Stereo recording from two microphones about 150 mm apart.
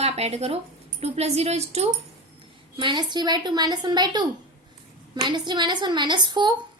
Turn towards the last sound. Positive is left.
turn(degrees=-30)  # may be behind; listen again after turning